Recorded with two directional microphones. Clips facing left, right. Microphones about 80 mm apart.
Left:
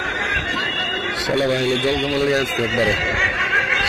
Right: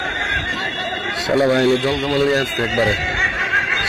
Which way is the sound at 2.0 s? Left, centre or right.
Right.